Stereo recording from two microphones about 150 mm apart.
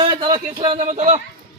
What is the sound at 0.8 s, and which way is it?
Speech, 55° right (ahead or behind).